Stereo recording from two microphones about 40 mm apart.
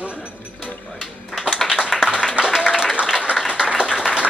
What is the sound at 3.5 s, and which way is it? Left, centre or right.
Applause, right.